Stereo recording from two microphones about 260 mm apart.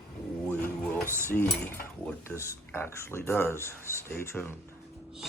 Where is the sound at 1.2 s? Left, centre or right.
Centre.